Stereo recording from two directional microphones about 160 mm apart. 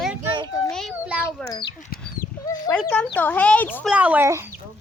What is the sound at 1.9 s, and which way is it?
Chicken, 65° left (ahead or behind).